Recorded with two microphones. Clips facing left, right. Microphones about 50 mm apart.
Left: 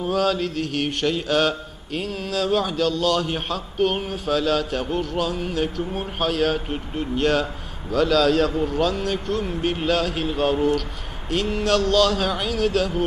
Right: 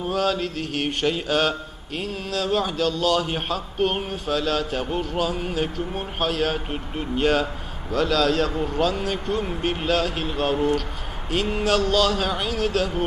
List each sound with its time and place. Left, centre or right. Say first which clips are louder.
0.0 s mantra: left 2 dB; centre